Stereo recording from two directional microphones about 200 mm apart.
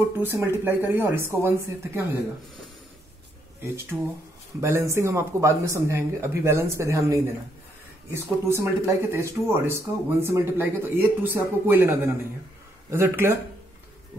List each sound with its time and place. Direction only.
0.2 s speech: 10° right (ahead or behind)
3.6 s speech: 10° right (ahead or behind)